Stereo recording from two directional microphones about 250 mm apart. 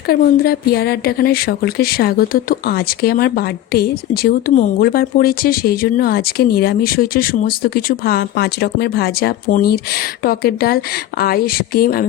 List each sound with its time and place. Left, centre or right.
0.1 s speech: left